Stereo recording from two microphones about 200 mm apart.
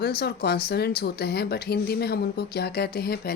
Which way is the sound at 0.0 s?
50° left (ahead or behind).